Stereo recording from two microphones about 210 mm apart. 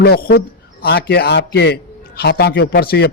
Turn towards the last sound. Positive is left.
turn(degrees=50)  # may be behind; listen again after turning